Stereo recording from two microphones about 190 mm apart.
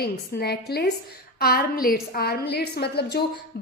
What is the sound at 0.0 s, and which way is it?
A woman's voice, 55° left (ahead or behind).